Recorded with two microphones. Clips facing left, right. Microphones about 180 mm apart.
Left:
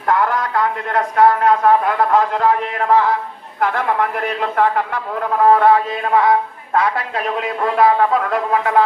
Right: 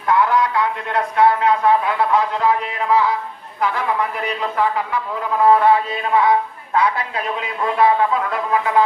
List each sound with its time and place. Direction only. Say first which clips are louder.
0.1 s a man's voice: right 1 dB; 45° left (ahead or behind)